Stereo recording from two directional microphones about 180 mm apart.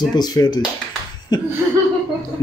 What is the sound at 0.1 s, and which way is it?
Speech, 20° left (ahead or behind).